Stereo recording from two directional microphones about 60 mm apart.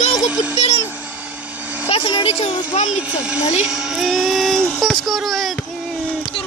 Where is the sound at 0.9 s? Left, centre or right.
Right.